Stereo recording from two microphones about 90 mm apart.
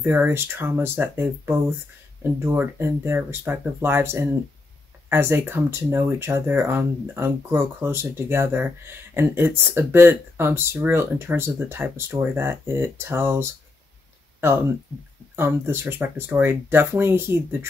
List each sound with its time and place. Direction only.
0.0 s speech: 25° right (ahead or behind)
15.3 s speech: 25° right (ahead or behind)